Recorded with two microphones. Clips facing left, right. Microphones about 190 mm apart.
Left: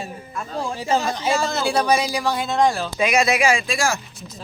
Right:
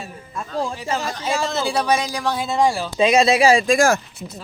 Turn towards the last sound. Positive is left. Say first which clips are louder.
# right 6 dB
turn(degrees=-50)  # may be behind; listen again after turning